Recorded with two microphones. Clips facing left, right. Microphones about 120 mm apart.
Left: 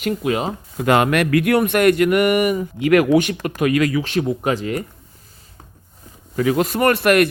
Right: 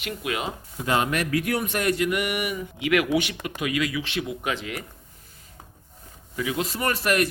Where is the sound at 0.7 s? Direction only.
65° left (ahead or behind); by 4.8 s 40° left (ahead or behind).